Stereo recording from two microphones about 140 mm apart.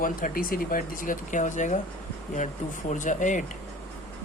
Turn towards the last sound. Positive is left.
turn(degrees=65)  # may be behind; listen again after turning